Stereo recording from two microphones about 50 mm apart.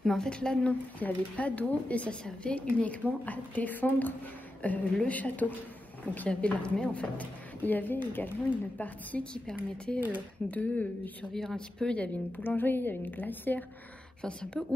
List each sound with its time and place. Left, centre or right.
0.0 s a woman's voice: centre
0.9 s a woman's voice: left
8.7 s a woman's voice: left
9.9 s speech: right
10.5 s a woman's voice: left
11.3 s speech: centre
12.4 s a woman's voice: left
14.2 s a woman's voice: centre